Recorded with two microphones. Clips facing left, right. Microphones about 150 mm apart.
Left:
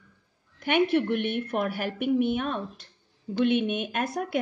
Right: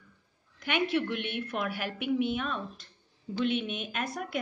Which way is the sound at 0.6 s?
55° left (ahead or behind).